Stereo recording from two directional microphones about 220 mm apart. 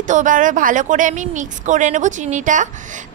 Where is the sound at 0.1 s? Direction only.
35° right (ahead or behind).